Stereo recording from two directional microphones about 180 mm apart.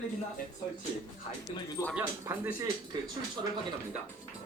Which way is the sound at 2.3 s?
15° right (ahead or behind).